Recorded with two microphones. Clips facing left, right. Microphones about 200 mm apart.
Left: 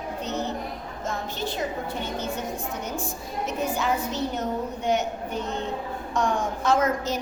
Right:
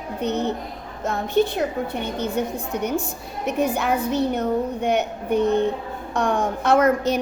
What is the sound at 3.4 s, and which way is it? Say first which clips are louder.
A woman's voice: right 5 dB; 60° right (ahead or behind).